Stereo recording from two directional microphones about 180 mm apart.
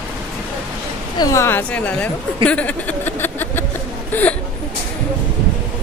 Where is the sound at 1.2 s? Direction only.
15° left (ahead or behind).